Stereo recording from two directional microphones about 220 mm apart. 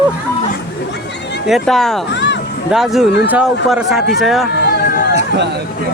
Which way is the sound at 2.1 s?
55° left (ahead or behind).